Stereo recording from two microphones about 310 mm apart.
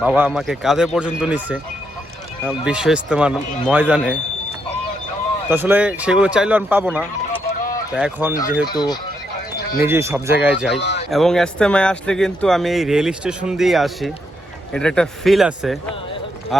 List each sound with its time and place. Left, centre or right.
0.0 s speech: centre
5.5 s speech: centre
8.6 s speech: centre
9.8 s speech: centre
10.8 s speech: left
11.1 s speech: centre